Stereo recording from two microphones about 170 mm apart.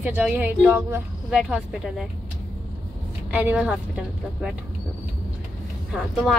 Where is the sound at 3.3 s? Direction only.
10° right (ahead or behind).